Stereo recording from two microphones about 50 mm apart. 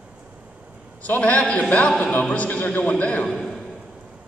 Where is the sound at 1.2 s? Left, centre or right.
Left.